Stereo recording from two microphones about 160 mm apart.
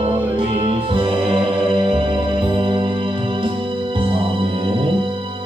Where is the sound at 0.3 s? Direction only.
35° right (ahead or behind).